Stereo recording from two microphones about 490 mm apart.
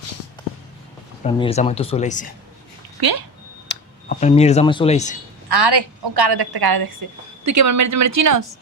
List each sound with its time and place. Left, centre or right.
1.2 s speech: centre
3.0 s a woman's voice: right
3.7 s speech: centre
5.5 s a woman's voice: right
7.4 s speech: right